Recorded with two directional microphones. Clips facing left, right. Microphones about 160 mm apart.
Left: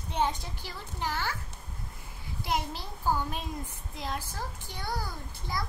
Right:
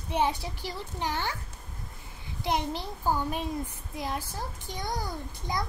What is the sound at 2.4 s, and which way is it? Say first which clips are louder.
Speech: right 3 dB; 20° right (ahead or behind).